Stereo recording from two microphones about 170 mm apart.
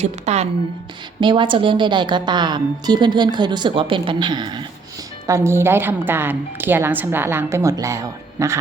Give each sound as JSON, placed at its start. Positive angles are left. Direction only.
{"t": 0.0, "sound": "a woman's voice", "side_deg": -40}
{"t": 1.2, "sound": "a woman's voice", "side_deg": -30}